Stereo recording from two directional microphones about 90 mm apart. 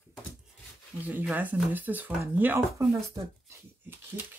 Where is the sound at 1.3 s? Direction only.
20° right (ahead or behind).